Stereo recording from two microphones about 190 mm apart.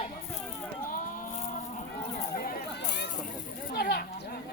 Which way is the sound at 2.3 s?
50° left (ahead or behind).